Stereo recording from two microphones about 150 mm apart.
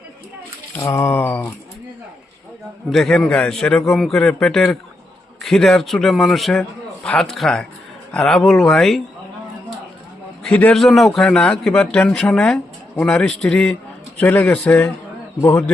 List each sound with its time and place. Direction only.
0.8 s speech: 20° left (ahead or behind)
2.9 s a man's voice: 5° left (ahead or behind)
10.4 s a man's voice: 10° left (ahead or behind)
15.4 s speech: 20° left (ahead or behind)